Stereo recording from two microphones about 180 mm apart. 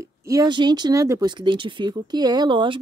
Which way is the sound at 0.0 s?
15° right (ahead or behind).